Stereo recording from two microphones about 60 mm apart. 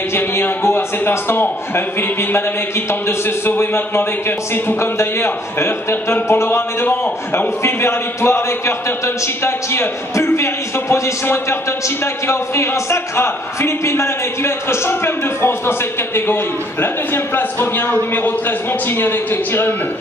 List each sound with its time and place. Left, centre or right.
0.1 s a man's voice: left
2.9 s a man's voice: left
16.8 s a man's voice: left